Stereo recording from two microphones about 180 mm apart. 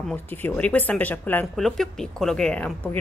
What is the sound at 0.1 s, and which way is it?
A woman's voice, 10° left (ahead or behind).